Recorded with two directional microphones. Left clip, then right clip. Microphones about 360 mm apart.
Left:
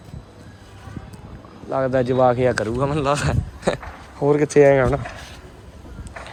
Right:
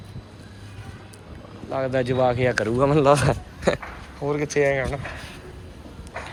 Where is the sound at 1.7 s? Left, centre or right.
Centre.